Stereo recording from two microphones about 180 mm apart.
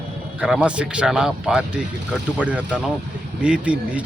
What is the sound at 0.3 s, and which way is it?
A man's voice, 5° right (ahead or behind).